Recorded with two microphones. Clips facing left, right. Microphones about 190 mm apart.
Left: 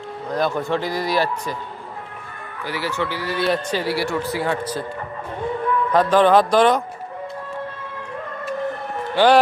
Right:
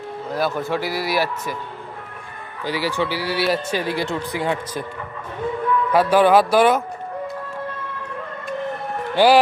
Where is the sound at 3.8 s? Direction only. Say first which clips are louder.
Left 1 dB; 20° right (ahead or behind).